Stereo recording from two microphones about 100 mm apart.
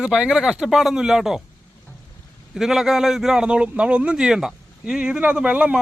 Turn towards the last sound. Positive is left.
turn(degrees=-10)  # may be behind; listen again after turning